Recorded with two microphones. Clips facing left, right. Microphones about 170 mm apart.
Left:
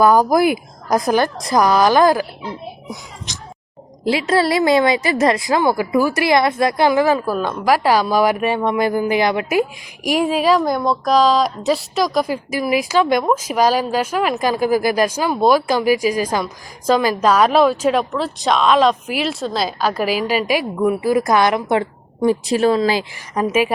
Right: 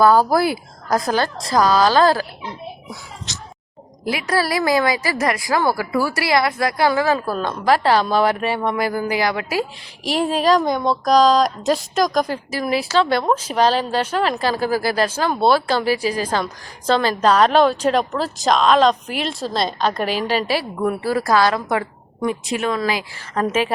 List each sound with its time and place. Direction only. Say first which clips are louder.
0.0 s a woman's voice: left 2 dB; 15° left (ahead or behind)
4.0 s a woman's voice: left 5 dB; 25° left (ahead or behind)
23.3 s a woman's voice: left 2 dB; 10° left (ahead or behind)